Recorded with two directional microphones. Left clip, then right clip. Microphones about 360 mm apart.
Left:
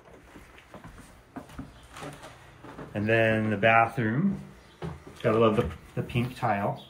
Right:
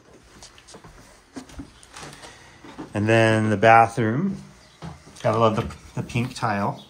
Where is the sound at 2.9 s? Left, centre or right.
Right.